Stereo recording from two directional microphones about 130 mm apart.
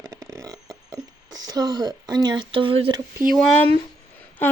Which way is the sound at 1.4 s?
30° right (ahead or behind).